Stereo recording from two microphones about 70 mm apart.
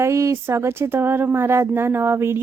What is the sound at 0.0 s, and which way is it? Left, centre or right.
Speech, right.